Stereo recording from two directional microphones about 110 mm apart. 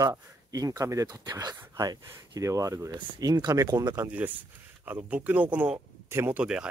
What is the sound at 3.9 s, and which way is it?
Speech, 15° right (ahead or behind).